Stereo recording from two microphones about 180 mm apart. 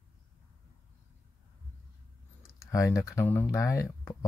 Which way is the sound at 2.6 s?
15° left (ahead or behind).